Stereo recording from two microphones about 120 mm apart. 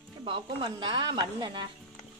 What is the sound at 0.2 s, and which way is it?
A woman's voice, 45° right (ahead or behind).